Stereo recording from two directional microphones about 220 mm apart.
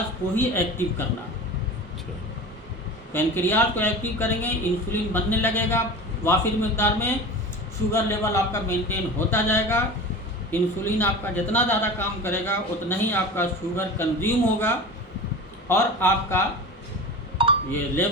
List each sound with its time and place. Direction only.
0.3 s a man's voice: 10° left (ahead or behind)
3.1 s a man's voice: 10° left (ahead or behind)
15.7 s a man's voice: 10° left (ahead or behind)
17.4 s a sound: 25° right (ahead or behind)